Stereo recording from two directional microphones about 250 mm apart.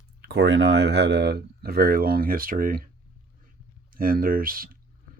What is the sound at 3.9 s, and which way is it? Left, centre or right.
Speech, right.